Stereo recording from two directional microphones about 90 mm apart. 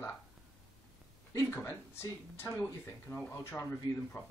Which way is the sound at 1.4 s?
25° left (ahead or behind).